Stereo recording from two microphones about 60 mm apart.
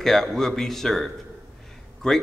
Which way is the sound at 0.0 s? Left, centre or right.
Centre.